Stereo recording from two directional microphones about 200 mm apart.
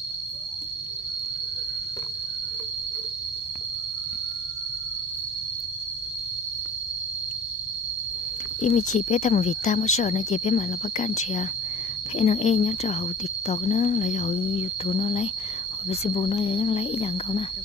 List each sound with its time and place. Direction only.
8.5 s speech: 35° left (ahead or behind)